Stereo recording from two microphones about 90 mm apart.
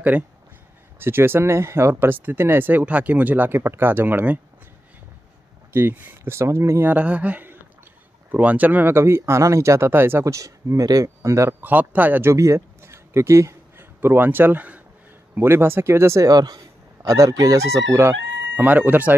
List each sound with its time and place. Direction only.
0.1 s a sound: 10° right (ahead or behind)
0.9 s speech: 25° right (ahead or behind)
5.7 s speech: 25° right (ahead or behind)
6.9 s a sound: 15° right (ahead or behind)
8.3 s speech: 15° right (ahead or behind); by 11.5 s 35° right (ahead or behind)
11.6 s speech: 20° right (ahead or behind)
12.3 s a man's voice: 30° right (ahead or behind)
16.3 s speech: 50° right (ahead or behind); by 18.1 s 30° right (ahead or behind)
18.6 s speech: 20° right (ahead or behind)